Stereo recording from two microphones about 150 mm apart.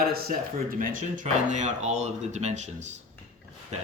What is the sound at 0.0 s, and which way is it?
Speech, 85° right.